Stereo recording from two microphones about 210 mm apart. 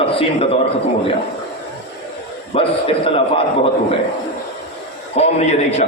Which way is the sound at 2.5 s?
30° left (ahead or behind).